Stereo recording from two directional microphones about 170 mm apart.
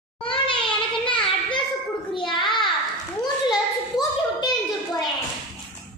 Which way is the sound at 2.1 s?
30° left (ahead or behind).